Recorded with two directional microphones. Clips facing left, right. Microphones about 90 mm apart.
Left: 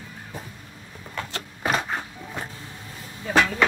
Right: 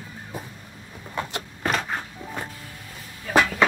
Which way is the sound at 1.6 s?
5° left (ahead or behind).